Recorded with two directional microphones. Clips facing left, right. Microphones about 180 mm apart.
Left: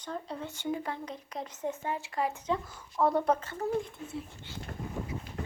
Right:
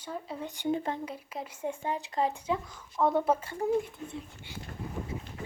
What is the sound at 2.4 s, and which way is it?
Speech, 5° right (ahead or behind).